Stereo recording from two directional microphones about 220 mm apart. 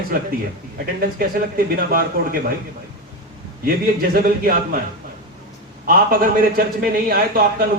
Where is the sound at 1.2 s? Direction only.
40° right (ahead or behind).